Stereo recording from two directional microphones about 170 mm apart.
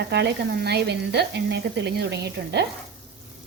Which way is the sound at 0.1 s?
85° right.